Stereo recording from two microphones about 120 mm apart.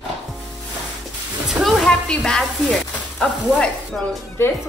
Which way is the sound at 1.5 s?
Centre (ahead or behind).